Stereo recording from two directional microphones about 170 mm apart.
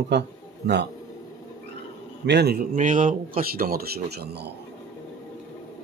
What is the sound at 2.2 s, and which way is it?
Speech, 80° right.